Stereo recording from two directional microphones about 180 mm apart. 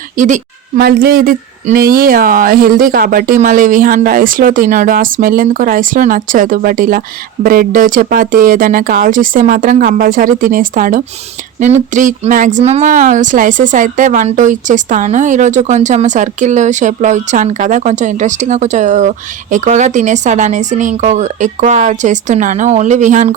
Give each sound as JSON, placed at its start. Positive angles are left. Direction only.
{"t": 0.2, "sound": "speech", "side_deg": -45}
{"t": 0.8, "sound": "speech", "side_deg": -55}